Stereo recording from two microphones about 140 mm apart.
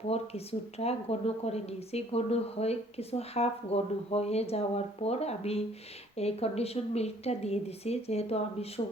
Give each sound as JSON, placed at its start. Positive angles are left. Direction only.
{"t": 0.1, "sound": "a woman's voice", "side_deg": 45}